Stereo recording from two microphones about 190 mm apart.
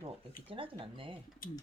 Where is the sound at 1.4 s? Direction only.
50° left (ahead or behind).